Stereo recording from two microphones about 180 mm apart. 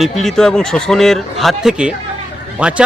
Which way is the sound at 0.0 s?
Centre (ahead or behind).